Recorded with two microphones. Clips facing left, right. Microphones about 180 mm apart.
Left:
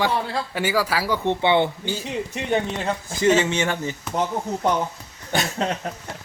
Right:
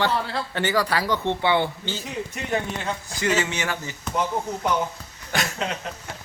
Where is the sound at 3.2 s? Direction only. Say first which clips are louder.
Left 6 dB; 25° left (ahead or behind).